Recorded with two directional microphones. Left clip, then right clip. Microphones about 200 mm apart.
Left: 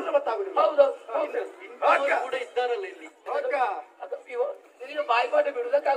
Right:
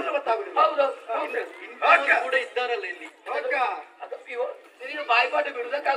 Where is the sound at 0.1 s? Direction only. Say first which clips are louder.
Left 1 dB; 60° left (ahead or behind).